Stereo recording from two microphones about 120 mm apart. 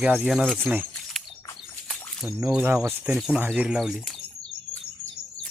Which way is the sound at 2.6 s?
20° right (ahead or behind).